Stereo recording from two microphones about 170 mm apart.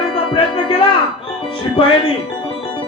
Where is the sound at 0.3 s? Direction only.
30° left (ahead or behind).